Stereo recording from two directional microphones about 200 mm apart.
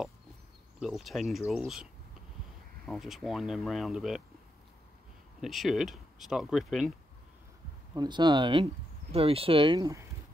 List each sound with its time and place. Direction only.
0.7 s speech: centre (ahead or behind)
2.9 s speech: centre (ahead or behind)
5.4 s speech: centre (ahead or behind)
7.9 s speech: 20° right (ahead or behind)